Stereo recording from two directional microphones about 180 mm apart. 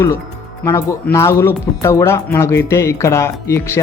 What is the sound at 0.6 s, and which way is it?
Speech, 15° left (ahead or behind).